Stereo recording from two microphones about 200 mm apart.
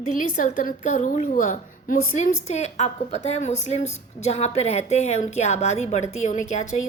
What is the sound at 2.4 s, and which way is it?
A woman's voice, 35° left (ahead or behind).